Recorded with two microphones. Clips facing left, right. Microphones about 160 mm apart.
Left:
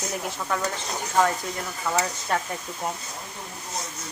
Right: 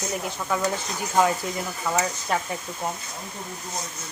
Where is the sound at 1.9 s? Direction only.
5° right (ahead or behind).